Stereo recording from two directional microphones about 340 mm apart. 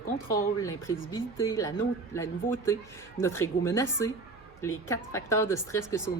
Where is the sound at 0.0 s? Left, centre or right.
Left.